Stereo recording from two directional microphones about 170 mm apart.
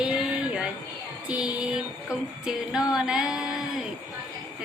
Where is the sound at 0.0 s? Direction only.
5° right (ahead or behind).